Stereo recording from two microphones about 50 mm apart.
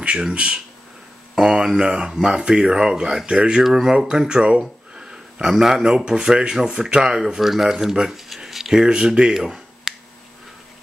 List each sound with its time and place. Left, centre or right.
0.0 s speech: right
1.8 s speech: centre
3.6 s speech: centre
8.8 s speech: centre